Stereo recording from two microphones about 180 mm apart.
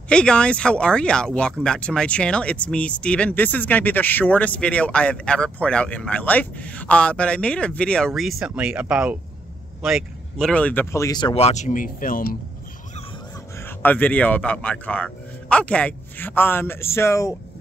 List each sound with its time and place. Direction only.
0.1 s speech: 5° left (ahead or behind); by 12.4 s 50° left (ahead or behind)
13.6 s speech: 10° left (ahead or behind)